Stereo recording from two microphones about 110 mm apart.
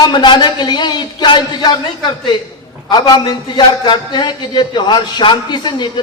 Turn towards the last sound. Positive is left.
turn(degrees=45)  # may be behind; listen again after turning